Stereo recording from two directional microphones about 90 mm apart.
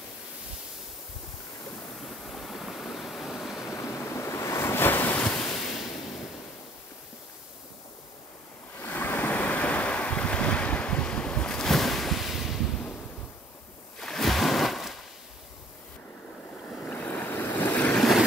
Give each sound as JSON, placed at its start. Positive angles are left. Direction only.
{"t": 2.0, "sound": "waves", "side_deg": 5}
{"t": 3.7, "sound": "waves", "side_deg": 30}
{"t": 8.7, "sound": "waves", "side_deg": 20}
{"t": 13.9, "sound": "a sound", "side_deg": 5}
{"t": 16.6, "sound": "waves", "side_deg": 10}
{"t": 17.9, "sound": "vehicle", "side_deg": 0}